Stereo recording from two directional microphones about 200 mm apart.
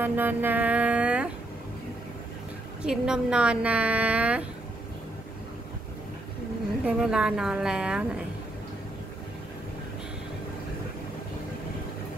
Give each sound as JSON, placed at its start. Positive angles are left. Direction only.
{"t": 0.0, "sound": "music", "side_deg": -10}
{"t": 2.8, "sound": "a woman's voice", "side_deg": -5}
{"t": 6.9, "sound": "a woman's voice", "side_deg": -5}